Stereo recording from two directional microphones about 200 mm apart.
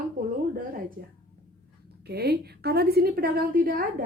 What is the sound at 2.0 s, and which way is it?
A woman's voice, 55° right (ahead or behind).